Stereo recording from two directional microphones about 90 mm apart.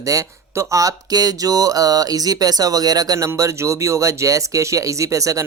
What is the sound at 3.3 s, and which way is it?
Speech, 35° right (ahead or behind).